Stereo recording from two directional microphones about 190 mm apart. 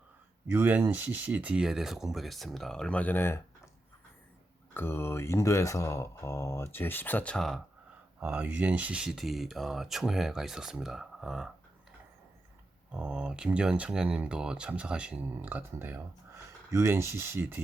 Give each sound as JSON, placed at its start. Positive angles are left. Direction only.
{"t": 0.4, "sound": "speech", "side_deg": -10}
{"t": 4.7, "sound": "speech", "side_deg": 10}
{"t": 12.9, "sound": "speech", "side_deg": -5}